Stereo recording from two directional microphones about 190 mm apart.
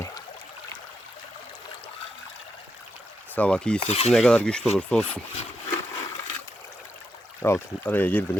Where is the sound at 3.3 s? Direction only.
5° left (ahead or behind).